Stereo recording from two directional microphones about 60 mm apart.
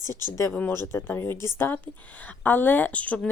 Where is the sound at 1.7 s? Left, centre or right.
Left.